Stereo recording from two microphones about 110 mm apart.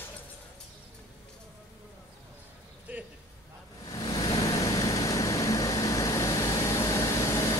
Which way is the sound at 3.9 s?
35° left (ahead or behind).